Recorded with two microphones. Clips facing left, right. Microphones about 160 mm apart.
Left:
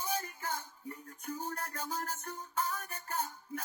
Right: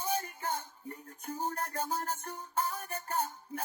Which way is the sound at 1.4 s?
30° right (ahead or behind).